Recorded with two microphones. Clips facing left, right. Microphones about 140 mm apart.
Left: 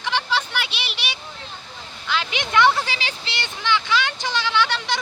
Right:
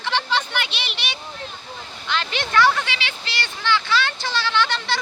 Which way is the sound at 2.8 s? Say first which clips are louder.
Left 1 dB; 40° left (ahead or behind).